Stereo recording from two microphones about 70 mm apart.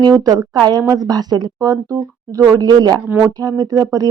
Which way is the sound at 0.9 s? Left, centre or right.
Right.